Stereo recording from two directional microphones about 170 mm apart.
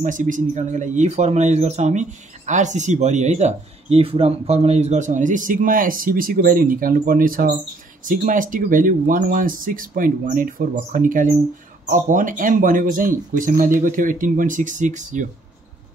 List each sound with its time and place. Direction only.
0.0 s speech: 50° right (ahead or behind)